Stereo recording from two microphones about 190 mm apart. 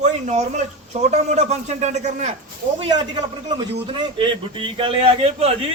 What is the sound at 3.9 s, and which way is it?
A man's voice, 25° right (ahead or behind).